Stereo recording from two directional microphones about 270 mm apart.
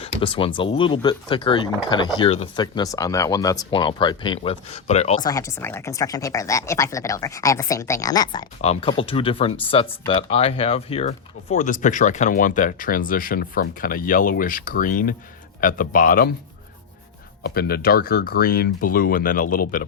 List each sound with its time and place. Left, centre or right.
0.0 s speech: centre
5.3 s speech: centre; by 16.3 s left
17.4 s speech: left